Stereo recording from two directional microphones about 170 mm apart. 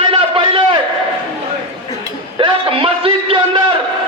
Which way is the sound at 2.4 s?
30° right (ahead or behind).